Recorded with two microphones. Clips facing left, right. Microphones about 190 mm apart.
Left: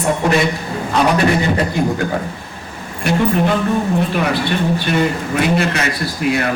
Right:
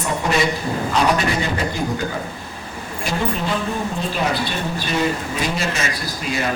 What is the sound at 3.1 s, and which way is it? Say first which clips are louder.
A man's voice: left 7 dB; 60° left (ahead or behind).